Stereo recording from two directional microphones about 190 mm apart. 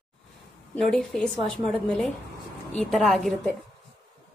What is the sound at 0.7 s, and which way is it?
A woman's voice, centre (ahead or behind).